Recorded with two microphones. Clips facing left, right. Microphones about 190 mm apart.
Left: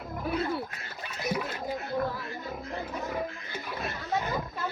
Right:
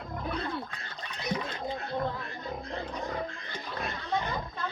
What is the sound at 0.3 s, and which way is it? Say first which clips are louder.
Roaring cats: left 5 dB; 5° left (ahead or behind).